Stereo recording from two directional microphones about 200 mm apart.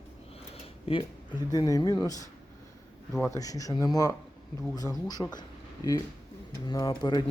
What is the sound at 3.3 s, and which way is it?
Speech, 15° left (ahead or behind).